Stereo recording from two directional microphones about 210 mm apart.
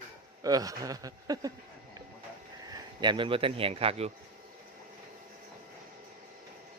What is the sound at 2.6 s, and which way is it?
Speech, 20° right (ahead or behind).